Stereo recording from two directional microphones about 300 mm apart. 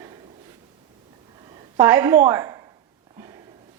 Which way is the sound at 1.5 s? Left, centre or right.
Centre.